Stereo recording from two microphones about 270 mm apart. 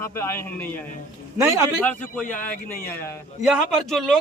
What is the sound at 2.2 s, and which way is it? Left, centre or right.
Speech, left.